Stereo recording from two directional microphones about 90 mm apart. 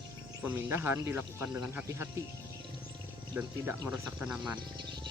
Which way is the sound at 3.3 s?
25° right (ahead or behind).